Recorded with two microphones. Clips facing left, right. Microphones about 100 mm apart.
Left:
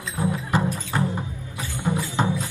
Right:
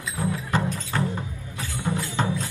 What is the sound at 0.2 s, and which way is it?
Music, 15° left (ahead or behind).